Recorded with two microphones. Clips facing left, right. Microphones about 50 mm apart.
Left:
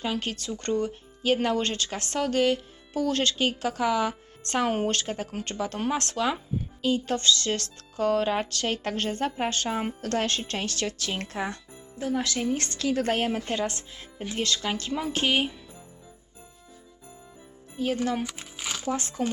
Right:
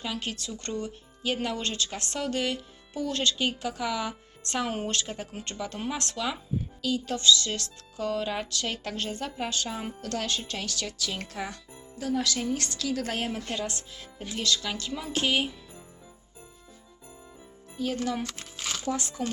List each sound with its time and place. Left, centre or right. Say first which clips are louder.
0.0 s speech: left 4 dB; left
6.8 s speech: even; left
17.7 s speech: left 3 dB; left
18.9 s speech: left 1 dB; left